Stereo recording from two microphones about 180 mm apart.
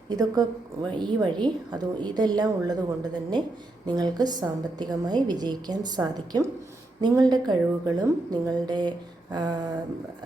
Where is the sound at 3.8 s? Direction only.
20° right (ahead or behind).